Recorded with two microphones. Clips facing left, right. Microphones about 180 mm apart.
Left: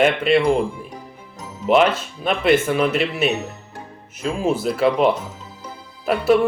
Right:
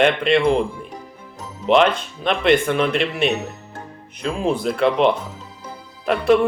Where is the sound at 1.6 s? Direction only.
5° left (ahead or behind).